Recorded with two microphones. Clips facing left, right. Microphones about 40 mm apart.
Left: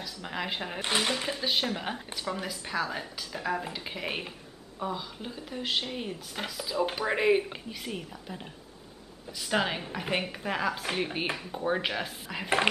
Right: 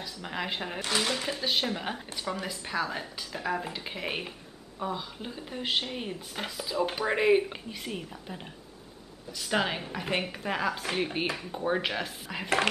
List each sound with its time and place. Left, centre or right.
0.0 s speech: centre
0.8 s speech: centre
1.1 s speech: centre
9.5 s speech: centre